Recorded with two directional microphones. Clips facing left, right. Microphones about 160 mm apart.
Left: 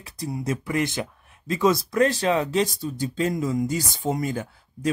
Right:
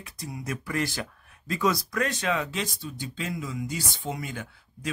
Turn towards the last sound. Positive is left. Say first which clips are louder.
# left 8 dB
turn(degrees=40)  # may be behind; listen again after turning